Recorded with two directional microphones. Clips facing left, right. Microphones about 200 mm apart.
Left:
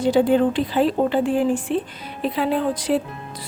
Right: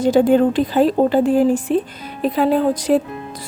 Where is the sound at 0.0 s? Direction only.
45° right (ahead or behind).